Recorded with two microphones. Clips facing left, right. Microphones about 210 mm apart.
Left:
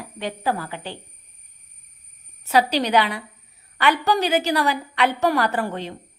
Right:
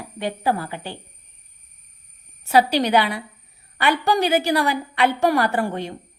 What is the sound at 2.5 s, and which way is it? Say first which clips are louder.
A woman's voice: right 2 dB; 10° right (ahead or behind).